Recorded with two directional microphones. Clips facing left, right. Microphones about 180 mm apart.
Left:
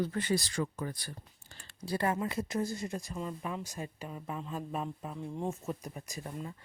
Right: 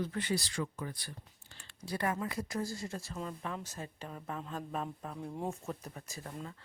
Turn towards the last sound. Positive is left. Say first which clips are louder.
# left 3 dB
turn(degrees=15)  # may be behind; listen again after turning